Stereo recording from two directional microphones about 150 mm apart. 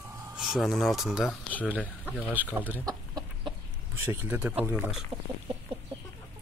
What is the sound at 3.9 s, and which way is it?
Speech, 15° right (ahead or behind).